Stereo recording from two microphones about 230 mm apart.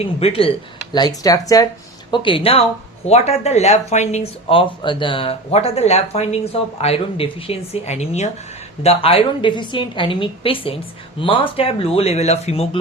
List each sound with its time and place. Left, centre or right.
0.0 s speech: left